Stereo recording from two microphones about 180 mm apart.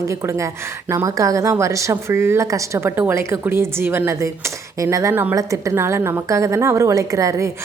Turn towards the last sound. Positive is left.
turn(degrees=-15)  # may be behind; listen again after turning